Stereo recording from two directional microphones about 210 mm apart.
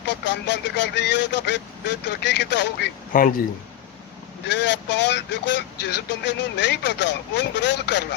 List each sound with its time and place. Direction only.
0.3 s speech: 55° left (ahead or behind)
3.1 s a man's voice: 40° left (ahead or behind)
4.4 s speech: 55° left (ahead or behind)